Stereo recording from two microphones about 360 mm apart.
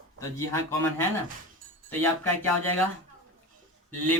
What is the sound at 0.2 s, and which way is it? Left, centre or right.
Speech, centre.